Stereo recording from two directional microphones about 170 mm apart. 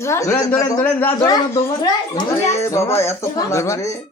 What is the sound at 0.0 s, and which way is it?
A child's voice, 15° left (ahead or behind).